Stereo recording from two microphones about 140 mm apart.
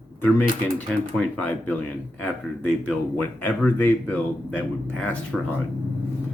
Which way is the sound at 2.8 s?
10° left (ahead or behind).